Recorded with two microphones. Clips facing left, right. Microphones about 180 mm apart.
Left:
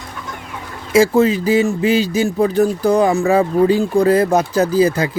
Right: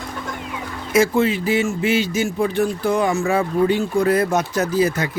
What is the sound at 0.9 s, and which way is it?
Speech, 35° left (ahead or behind).